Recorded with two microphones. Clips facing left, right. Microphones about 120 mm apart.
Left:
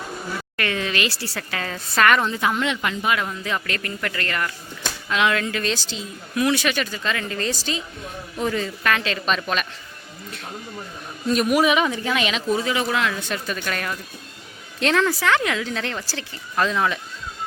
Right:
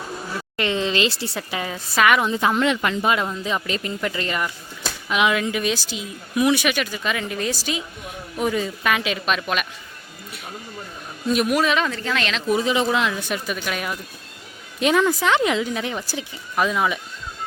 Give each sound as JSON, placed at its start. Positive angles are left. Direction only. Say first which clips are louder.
{"t": 0.5, "sound": "a woman's voice", "louder": "right 4 dB", "side_deg": -20}
{"t": 2.3, "sound": "speech", "louder": "right 2 dB", "side_deg": -30}
{"t": 2.6, "sound": "speech", "louder": "right 4 dB", "side_deg": -40}
{"t": 3.1, "sound": "a woman's voice", "louder": "even", "side_deg": -20}
{"t": 11.3, "sound": "speech", "louder": "even", "side_deg": 0}
{"t": 11.5, "sound": "speech", "louder": "left 2 dB", "side_deg": 15}
{"t": 12.5, "sound": "a woman's voice", "louder": "right 5 dB", "side_deg": -20}